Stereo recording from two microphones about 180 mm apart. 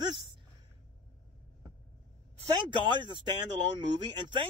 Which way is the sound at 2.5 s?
25° right (ahead or behind).